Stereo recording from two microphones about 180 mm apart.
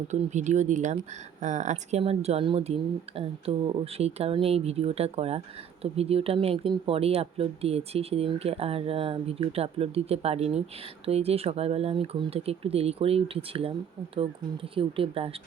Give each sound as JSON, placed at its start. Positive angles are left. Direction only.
{"t": 0.1, "sound": "speech", "side_deg": -40}